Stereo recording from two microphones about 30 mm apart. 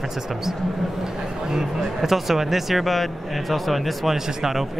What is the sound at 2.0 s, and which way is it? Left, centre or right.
Speech, centre.